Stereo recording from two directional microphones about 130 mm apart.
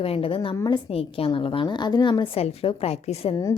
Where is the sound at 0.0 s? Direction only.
45° left (ahead or behind).